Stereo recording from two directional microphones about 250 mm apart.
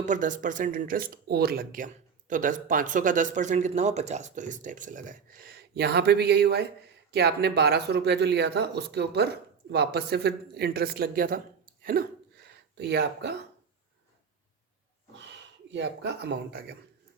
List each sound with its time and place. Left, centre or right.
0.0 s speech: right
15.7 s speech: right